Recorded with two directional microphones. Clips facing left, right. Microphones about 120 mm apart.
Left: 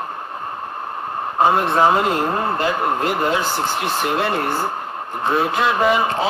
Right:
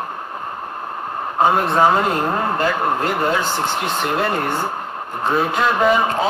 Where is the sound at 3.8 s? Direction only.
Centre (ahead or behind).